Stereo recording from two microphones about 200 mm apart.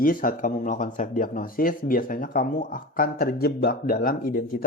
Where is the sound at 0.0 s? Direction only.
45° left (ahead or behind).